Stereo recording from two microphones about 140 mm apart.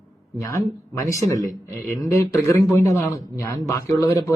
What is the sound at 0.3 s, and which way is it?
Speech, 20° left (ahead or behind).